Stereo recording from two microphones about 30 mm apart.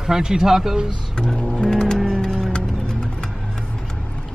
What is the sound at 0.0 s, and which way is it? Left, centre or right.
Speech, right.